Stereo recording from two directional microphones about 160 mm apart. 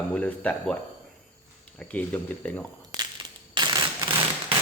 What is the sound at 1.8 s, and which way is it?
Speech, 10° left (ahead or behind).